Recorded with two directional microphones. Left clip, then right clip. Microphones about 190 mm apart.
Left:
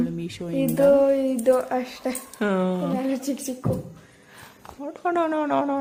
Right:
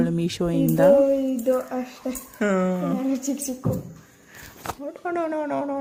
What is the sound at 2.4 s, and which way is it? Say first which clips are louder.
A woman's voice: right 1 dB; 10° left (ahead or behind).